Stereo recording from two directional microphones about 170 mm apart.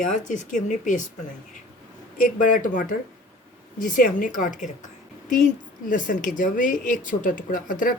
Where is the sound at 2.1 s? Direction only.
50° left (ahead or behind).